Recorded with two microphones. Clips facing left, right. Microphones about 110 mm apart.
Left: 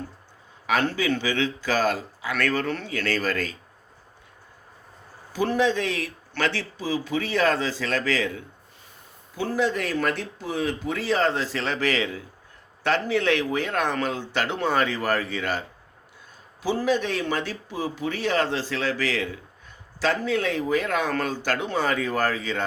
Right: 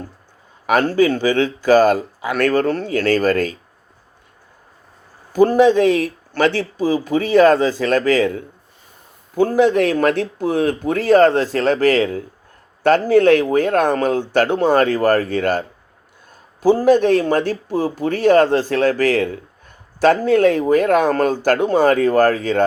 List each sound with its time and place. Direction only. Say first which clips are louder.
0.7 s speech: right 9 dB; 45° right (ahead or behind)
5.3 s speech: right 11 dB; 45° right (ahead or behind)
16.6 s speech: right 11 dB; 50° right (ahead or behind)